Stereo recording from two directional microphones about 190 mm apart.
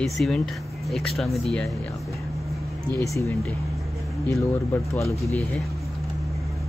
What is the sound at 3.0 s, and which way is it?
Speech, 15° left (ahead or behind).